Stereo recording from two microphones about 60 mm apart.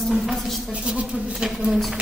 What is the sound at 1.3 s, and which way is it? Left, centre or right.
Speech, centre.